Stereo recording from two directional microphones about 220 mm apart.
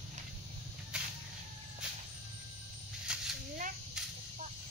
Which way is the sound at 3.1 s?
5° right (ahead or behind).